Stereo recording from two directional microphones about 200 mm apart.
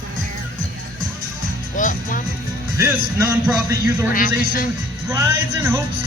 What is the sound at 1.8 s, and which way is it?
Music, 40° left (ahead or behind).